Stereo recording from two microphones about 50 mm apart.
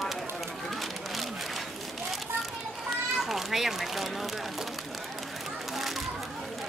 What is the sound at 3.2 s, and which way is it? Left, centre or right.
Children playing, centre.